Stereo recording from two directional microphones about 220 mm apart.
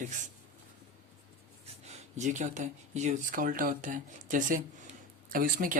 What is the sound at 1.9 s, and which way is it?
Speech, 30° right (ahead or behind).